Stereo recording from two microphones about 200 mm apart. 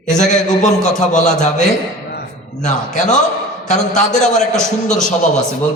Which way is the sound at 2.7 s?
35° left (ahead or behind).